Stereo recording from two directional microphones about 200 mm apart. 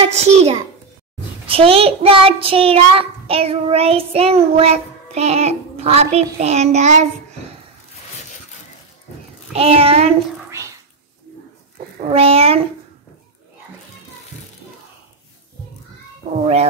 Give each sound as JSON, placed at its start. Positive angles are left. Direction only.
{"t": 0.0, "sound": "child singing", "side_deg": -30}
{"t": 8.2, "sound": "a sound", "side_deg": 35}
{"t": 9.5, "sound": "child singing", "side_deg": -30}
{"t": 12.1, "sound": "child singing", "side_deg": -30}